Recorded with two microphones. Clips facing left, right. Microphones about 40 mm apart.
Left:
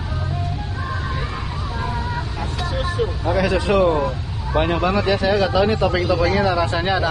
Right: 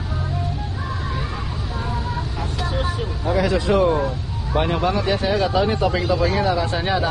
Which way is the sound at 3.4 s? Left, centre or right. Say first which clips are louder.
Left 1 dB; left.